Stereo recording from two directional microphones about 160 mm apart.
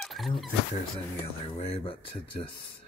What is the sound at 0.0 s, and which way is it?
Dog, centre (ahead or behind).